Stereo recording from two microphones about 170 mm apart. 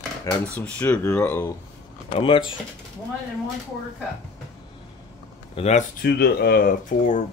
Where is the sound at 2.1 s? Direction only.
30° left (ahead or behind).